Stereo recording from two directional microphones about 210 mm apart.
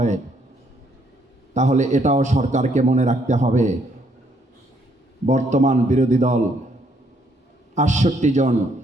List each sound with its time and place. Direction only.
1.5 s a man's voice: 35° right (ahead or behind)
5.2 s a man's voice: 35° right (ahead or behind)
7.8 s a man's voice: 35° right (ahead or behind)